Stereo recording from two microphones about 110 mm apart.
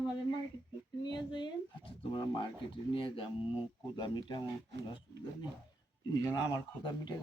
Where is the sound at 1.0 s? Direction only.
45° left (ahead or behind).